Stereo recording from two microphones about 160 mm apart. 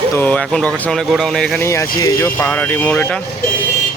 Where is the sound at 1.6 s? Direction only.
20° left (ahead or behind).